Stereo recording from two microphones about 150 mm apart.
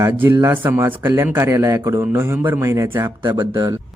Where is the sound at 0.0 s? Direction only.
15° right (ahead or behind).